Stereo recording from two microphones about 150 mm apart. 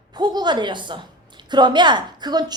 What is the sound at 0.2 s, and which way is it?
A woman's voice, 30° right (ahead or behind).